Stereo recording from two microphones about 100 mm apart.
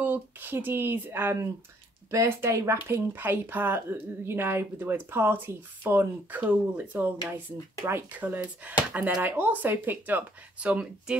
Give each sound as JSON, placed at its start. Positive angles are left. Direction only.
{"t": 0.0, "sound": "speech", "side_deg": -20}